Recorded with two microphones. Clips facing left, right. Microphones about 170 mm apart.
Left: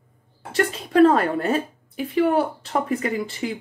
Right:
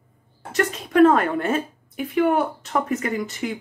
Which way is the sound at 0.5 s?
35° left (ahead or behind).